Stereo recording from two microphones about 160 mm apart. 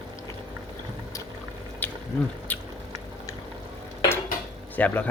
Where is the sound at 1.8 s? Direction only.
10° left (ahead or behind).